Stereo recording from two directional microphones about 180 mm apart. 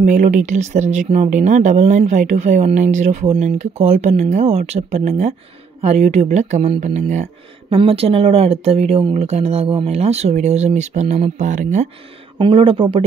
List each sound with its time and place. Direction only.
0.0 s speech: 45° right (ahead or behind)
12.4 s speech: 30° right (ahead or behind)